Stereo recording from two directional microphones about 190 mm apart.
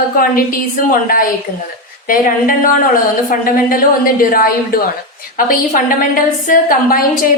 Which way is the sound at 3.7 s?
50° left (ahead or behind).